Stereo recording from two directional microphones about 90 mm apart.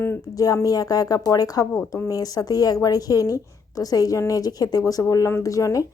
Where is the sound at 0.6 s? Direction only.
45° left (ahead or behind).